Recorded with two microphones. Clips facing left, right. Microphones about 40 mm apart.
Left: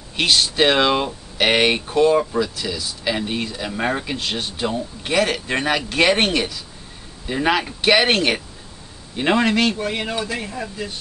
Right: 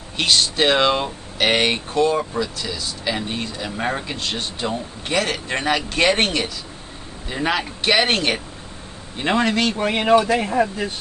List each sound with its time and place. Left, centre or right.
0.2 s speech: centre
9.8 s speech: right